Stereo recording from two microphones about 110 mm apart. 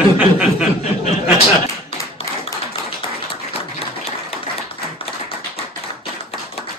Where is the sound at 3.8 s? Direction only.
65° left (ahead or behind).